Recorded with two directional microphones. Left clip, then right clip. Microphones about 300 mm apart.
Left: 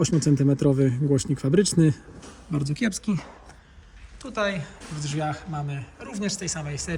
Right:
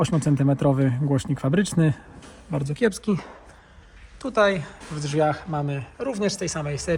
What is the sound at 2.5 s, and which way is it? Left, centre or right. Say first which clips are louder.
Speech: right 4 dB; right.